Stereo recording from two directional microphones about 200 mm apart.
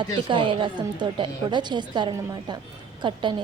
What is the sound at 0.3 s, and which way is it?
A woman's voice, 25° right (ahead or behind).